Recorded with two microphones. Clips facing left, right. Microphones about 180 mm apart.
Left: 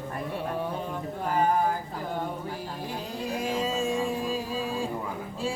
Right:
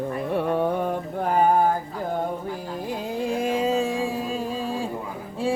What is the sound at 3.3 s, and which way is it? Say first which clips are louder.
Music: right 6 dB; 55° right (ahead or behind).